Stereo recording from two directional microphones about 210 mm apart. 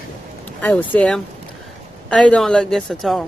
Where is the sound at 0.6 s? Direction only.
5° left (ahead or behind).